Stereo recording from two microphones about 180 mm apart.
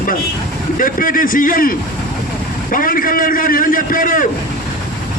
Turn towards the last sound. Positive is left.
turn(degrees=50)  # may be behind; listen again after turning